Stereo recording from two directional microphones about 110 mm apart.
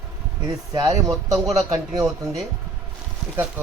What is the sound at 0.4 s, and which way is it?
Speech, 35° right (ahead or behind).